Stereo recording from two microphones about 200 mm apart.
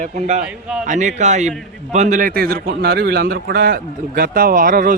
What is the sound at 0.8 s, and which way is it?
A man's voice, 40° right (ahead or behind).